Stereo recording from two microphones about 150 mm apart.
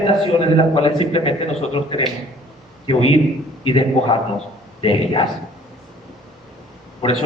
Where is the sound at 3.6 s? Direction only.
35° left (ahead or behind).